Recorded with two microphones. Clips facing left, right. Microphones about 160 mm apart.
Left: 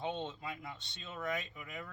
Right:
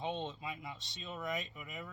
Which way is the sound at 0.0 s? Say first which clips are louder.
Even; centre (ahead or behind).